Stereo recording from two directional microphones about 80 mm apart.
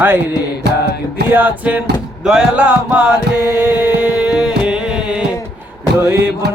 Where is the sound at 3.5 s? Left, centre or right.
Right; by 5.3 s centre.